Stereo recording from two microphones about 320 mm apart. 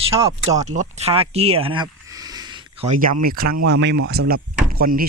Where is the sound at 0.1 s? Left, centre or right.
Centre.